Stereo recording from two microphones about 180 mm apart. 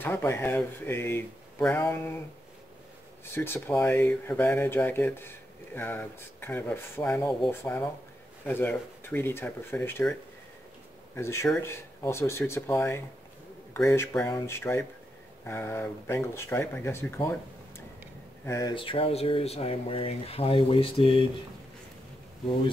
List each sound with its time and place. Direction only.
0.0 s speech: 10° left (ahead or behind)
3.3 s speech: 10° left (ahead or behind)
11.1 s speech: 15° left (ahead or behind); by 21.3 s 30° left (ahead or behind)